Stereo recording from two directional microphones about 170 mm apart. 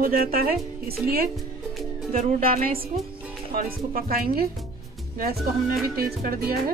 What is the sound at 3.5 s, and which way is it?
Speech, 60° right (ahead or behind).